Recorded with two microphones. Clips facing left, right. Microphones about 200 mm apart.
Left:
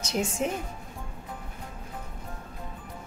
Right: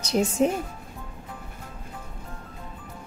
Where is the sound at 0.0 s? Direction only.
35° right (ahead or behind).